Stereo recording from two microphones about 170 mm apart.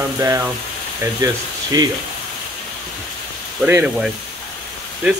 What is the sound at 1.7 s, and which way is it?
Speech, 20° right (ahead or behind).